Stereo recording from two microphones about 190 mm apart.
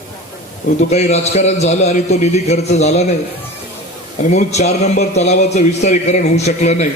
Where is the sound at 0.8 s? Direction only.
35° left (ahead or behind).